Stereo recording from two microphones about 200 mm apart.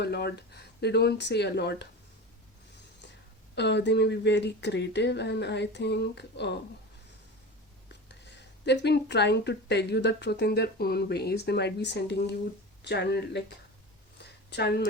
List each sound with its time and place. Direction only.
0.0 s speech: 55° left (ahead or behind)
3.5 s speech: 60° left (ahead or behind)
7.9 s speech: 60° left (ahead or behind)
14.2 s a sound: 55° left (ahead or behind)